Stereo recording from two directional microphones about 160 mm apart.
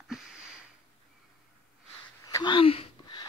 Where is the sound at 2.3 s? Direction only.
20° left (ahead or behind).